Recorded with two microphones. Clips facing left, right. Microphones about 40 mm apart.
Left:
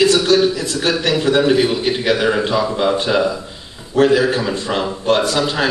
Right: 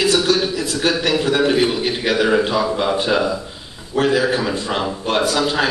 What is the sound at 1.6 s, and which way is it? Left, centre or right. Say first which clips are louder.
A man's voice: left 1 dB; centre.